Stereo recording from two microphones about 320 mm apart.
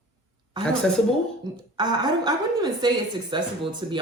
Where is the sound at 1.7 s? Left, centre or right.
Centre.